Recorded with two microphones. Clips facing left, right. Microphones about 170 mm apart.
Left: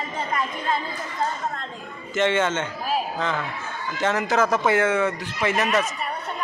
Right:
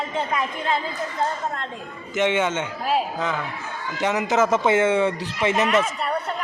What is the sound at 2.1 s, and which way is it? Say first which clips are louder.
A man's voice: even; 15° right (ahead or behind).